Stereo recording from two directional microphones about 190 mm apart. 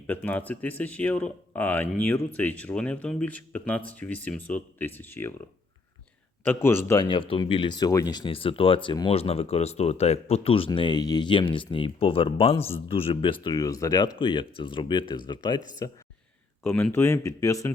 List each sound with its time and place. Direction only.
0.1 s speech: 10° left (ahead or behind)
6.4 s a man's voice: 10° left (ahead or behind)
16.6 s speech: 10° left (ahead or behind)